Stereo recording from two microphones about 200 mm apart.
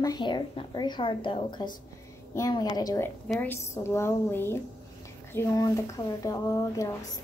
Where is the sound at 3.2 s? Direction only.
5° left (ahead or behind).